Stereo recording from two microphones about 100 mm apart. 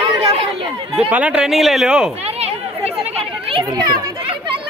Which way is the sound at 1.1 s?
10° right (ahead or behind).